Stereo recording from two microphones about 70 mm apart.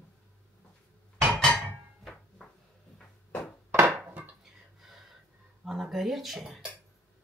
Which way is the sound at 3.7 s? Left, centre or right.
Right.